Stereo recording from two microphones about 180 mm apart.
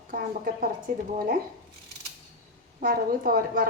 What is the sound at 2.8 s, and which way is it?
Speech, 55° right (ahead or behind).